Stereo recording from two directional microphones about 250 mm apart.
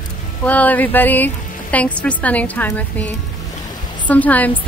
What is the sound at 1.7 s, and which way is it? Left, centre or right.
A woman's voice, centre.